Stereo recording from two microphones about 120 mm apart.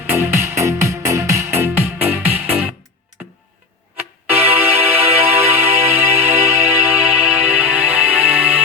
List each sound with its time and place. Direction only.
0.1 s music: 20° right (ahead or behind)
3.9 s music: 15° right (ahead or behind)